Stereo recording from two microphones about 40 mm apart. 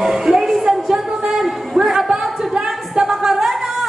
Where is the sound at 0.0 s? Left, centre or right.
Centre.